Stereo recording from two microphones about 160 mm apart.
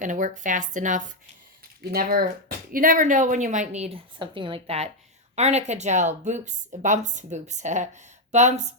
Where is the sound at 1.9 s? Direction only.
65° right (ahead or behind).